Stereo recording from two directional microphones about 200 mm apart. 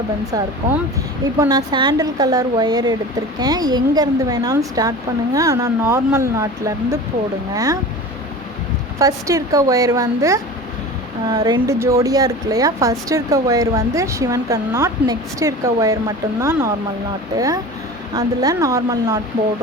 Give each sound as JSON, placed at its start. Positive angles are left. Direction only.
{"t": 1.4, "sound": "a woman's voice", "side_deg": -20}
{"t": 9.0, "sound": "speech", "side_deg": -15}